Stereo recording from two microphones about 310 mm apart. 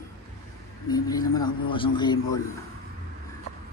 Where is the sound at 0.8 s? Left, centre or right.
Centre.